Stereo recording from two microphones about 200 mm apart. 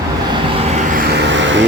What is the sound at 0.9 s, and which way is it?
Vehicle, 60° right (ahead or behind).